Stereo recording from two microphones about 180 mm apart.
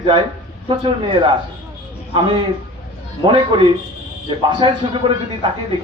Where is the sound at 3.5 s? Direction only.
25° right (ahead or behind).